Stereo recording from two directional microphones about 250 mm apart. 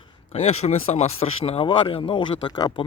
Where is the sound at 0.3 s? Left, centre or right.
Left.